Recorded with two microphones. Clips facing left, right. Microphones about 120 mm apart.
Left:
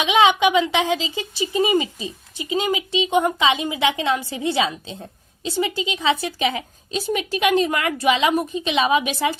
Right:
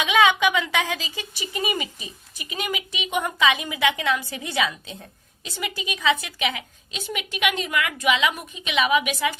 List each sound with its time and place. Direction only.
0.0 s speech: 25° left (ahead or behind)